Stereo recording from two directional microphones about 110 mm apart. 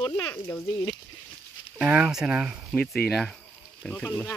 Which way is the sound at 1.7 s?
10° right (ahead or behind).